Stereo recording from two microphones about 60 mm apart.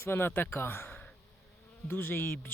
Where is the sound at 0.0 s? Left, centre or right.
Left.